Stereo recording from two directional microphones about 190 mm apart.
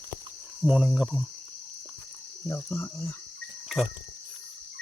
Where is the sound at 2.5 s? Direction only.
10° left (ahead or behind).